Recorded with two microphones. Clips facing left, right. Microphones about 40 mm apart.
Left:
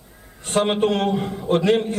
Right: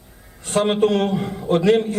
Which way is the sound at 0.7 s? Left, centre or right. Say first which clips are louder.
Right 2 dB; left.